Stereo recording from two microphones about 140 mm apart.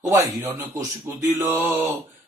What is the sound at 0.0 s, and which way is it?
Speech, 20° right (ahead or behind).